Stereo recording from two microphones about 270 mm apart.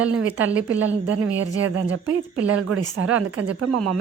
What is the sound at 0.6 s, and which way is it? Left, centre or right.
Speech, right.